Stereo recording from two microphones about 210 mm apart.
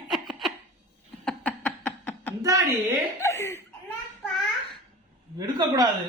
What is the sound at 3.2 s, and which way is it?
Speech, 15° left (ahead or behind).